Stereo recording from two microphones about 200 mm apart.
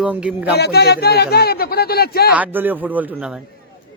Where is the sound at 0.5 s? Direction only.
55° left (ahead or behind).